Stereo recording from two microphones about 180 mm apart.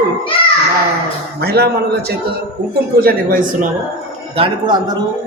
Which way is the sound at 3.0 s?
55° right (ahead or behind).